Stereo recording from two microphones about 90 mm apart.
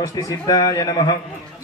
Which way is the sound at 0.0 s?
40° left (ahead or behind).